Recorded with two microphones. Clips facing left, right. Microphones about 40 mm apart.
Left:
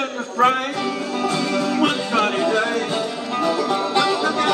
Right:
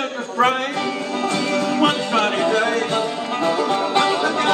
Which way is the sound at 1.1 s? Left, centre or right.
Right.